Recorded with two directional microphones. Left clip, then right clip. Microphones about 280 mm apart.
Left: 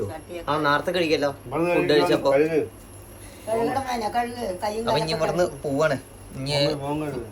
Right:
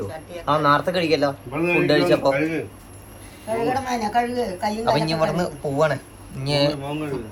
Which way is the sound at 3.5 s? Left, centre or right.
Centre.